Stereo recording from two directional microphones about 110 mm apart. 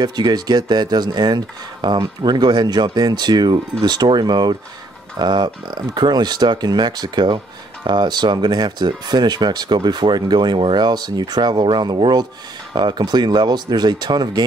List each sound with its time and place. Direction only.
0.0 s speech: 40° right (ahead or behind)